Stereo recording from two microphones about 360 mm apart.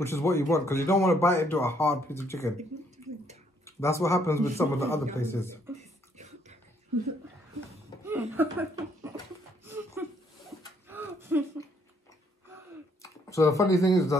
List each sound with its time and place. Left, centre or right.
0.0 s speech: centre
3.6 s speech: centre
6.1 s a sound: centre
8.0 s chuckle: centre
10.9 s a sound: centre
13.0 s speech: centre